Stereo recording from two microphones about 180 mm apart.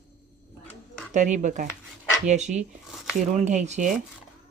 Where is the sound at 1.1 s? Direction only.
40° right (ahead or behind).